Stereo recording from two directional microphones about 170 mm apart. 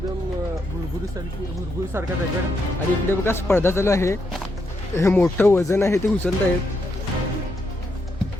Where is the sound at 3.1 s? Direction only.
15° left (ahead or behind).